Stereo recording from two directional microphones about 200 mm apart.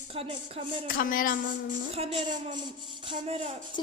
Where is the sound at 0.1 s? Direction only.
30° right (ahead or behind).